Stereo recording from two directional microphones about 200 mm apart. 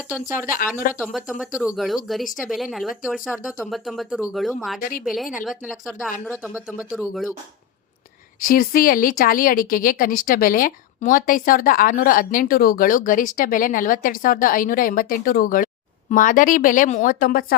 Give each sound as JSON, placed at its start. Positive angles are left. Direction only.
{"t": 0.3, "sound": "speech", "side_deg": 40}
{"t": 1.1, "sound": "speech", "side_deg": -5}
{"t": 4.8, "sound": "speech", "side_deg": 45}
{"t": 5.0, "sound": "speech", "side_deg": 0}
{"t": 8.4, "sound": "speech", "side_deg": 45}